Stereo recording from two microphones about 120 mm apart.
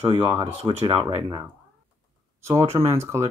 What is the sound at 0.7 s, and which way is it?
Speech, 35° right (ahead or behind).